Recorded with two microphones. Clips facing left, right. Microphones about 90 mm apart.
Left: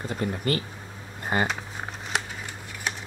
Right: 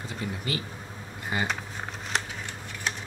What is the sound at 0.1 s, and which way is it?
Speech, 50° left (ahead or behind).